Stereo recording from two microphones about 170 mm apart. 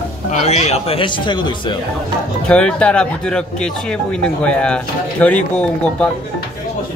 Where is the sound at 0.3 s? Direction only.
40° left (ahead or behind).